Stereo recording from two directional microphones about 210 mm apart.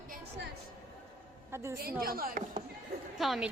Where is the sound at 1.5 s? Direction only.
15° right (ahead or behind).